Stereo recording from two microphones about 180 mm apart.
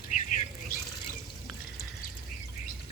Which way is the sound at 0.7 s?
55° left (ahead or behind).